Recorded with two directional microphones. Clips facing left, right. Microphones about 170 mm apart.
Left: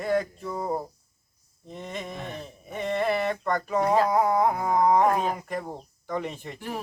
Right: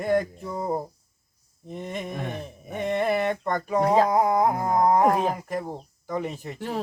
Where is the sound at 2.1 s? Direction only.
55° right (ahead or behind).